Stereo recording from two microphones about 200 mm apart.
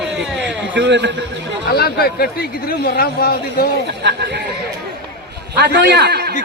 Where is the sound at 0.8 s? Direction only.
60° right (ahead or behind).